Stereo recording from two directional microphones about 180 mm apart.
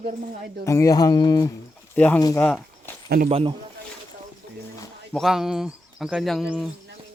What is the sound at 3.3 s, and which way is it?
Speech, 30° right (ahead or behind).